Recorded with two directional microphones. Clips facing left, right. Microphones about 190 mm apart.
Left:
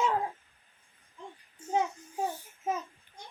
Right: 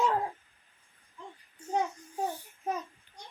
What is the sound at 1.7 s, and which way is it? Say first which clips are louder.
Child singing: left 1 dB; 5° left (ahead or behind).